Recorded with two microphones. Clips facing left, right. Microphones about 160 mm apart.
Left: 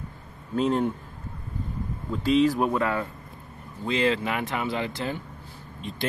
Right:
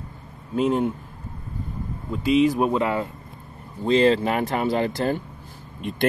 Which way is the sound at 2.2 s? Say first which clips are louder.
Right 2 dB; 10° right (ahead or behind).